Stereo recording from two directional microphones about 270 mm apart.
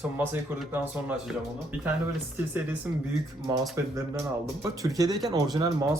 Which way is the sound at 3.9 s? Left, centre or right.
Centre.